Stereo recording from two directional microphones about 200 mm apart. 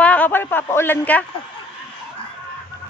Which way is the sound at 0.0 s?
5° left (ahead or behind).